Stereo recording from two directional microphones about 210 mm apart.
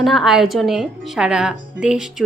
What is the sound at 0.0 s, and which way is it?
A woman's voice, centre (ahead or behind).